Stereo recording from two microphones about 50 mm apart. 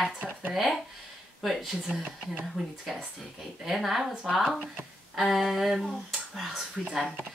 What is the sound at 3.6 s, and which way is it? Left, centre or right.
Speech, centre.